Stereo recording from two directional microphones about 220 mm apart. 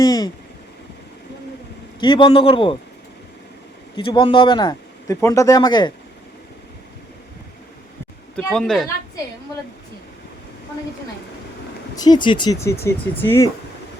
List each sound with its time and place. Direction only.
0.0 s a sound: 15° left (ahead or behind)
2.0 s speech: 20° left (ahead or behind)
3.9 s speech: 20° left (ahead or behind)
8.4 s speech: 5° left (ahead or behind)
11.9 s speech: 20° left (ahead or behind)